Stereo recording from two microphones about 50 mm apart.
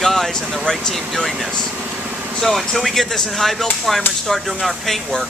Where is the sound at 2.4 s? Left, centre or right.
Centre.